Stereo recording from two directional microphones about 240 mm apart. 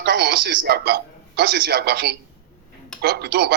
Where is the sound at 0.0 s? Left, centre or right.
Right.